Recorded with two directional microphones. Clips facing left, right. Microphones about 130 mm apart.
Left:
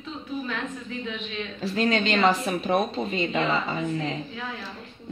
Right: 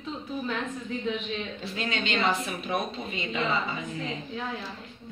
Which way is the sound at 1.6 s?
40° left (ahead or behind).